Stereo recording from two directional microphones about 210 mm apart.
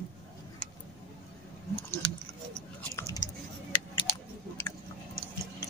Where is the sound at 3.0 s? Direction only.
15° left (ahead or behind).